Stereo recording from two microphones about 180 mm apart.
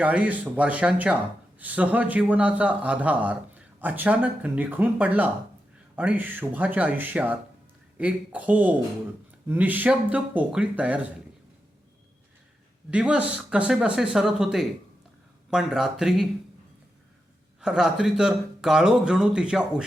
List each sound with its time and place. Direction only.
0.0 s a man's voice: 10° right (ahead or behind)
12.9 s speech: 5° right (ahead or behind)
17.6 s speech: 5° right (ahead or behind)